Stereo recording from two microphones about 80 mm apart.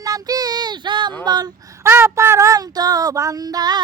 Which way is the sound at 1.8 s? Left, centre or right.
Right.